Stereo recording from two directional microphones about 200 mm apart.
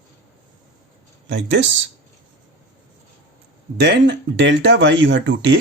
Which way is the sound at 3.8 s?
60° right (ahead or behind).